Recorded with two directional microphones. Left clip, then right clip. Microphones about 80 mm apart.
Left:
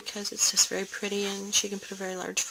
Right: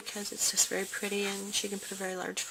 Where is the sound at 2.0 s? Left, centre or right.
Left.